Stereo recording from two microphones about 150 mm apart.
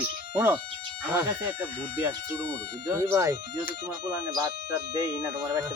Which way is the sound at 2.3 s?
10° left (ahead or behind).